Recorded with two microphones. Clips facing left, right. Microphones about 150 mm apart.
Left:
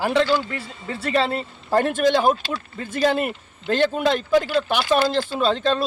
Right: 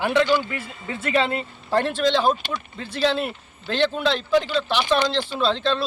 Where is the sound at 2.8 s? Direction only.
50° left (ahead or behind).